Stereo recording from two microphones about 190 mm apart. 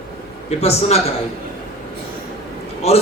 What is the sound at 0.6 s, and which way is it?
Speech, 35° left (ahead or behind).